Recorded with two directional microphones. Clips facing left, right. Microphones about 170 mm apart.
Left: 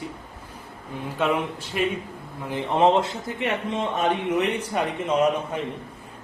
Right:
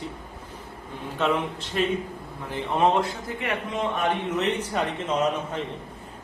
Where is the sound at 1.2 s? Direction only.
10° left (ahead or behind).